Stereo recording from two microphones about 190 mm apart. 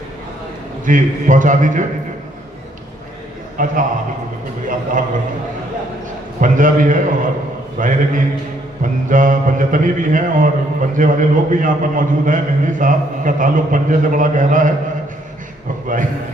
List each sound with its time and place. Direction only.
0.9 s speech: 45° right (ahead or behind)
3.6 s speech: 45° right (ahead or behind)
6.4 s speech: 45° right (ahead or behind)